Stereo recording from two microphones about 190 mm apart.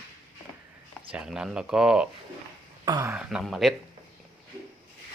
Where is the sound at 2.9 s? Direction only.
20° right (ahead or behind).